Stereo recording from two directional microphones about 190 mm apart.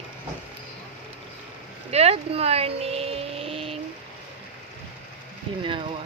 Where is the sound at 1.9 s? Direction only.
35° right (ahead or behind).